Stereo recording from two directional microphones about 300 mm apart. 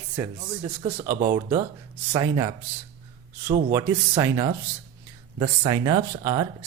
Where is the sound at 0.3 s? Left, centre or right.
Centre.